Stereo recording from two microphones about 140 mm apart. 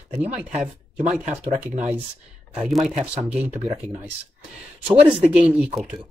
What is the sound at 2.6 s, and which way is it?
Speech, 5° right (ahead or behind).